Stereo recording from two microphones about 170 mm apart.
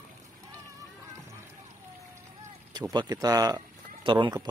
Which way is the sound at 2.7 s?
25° right (ahead or behind).